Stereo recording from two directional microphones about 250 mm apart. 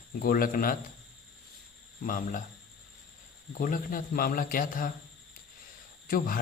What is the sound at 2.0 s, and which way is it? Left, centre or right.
Speech, left.